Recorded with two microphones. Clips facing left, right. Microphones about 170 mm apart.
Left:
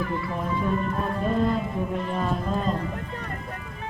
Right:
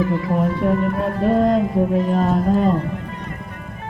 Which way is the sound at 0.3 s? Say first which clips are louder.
Right 7 dB; 75° right (ahead or behind).